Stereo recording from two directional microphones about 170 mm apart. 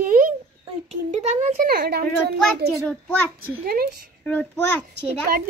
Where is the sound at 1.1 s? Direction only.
40° right (ahead or behind).